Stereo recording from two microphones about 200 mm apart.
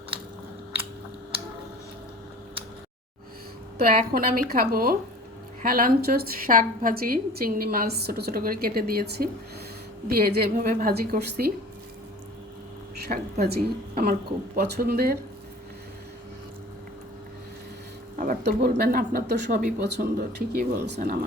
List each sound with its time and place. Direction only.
3.8 s a woman's voice: 45° right (ahead or behind)
13.4 s a woman's voice: 50° right (ahead or behind)
18.2 s a woman's voice: 50° right (ahead or behind)